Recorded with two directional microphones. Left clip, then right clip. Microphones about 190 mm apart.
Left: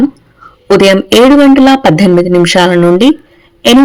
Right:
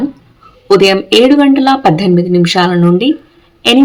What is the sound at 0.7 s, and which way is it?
Speech, 40° left (ahead or behind).